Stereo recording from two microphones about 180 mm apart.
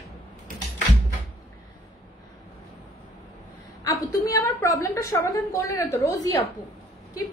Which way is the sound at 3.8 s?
20° left (ahead or behind).